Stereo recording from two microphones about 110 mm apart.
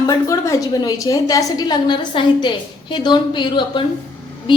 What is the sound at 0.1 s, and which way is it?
A woman's voice, 30° left (ahead or behind).